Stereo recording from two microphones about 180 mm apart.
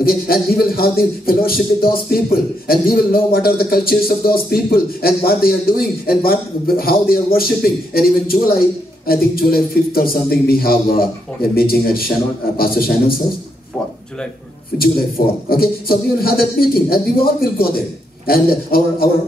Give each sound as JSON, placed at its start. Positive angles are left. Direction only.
{"t": 0.0, "sound": "speech", "side_deg": 55}
{"t": 14.8, "sound": "speech", "side_deg": 55}